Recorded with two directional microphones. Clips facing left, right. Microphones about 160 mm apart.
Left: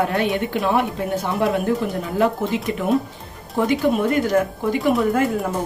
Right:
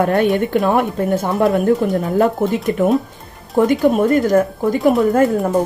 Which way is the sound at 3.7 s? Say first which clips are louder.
Right 3 dB; 45° right (ahead or behind).